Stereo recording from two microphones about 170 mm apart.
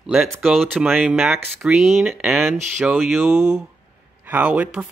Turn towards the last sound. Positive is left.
turn(degrees=-10)  # may be behind; listen again after turning